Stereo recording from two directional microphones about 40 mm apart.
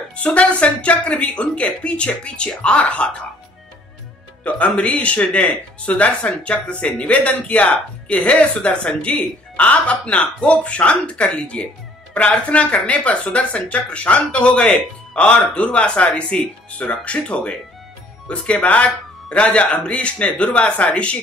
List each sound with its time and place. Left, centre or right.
0.1 s speech: left
4.5 s speech: left